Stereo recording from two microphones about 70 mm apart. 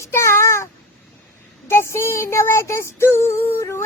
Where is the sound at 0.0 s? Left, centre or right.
Left.